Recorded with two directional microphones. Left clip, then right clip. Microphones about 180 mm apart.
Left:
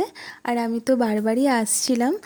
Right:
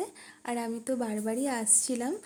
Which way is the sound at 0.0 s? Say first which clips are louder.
Left 11 dB; 35° left (ahead or behind).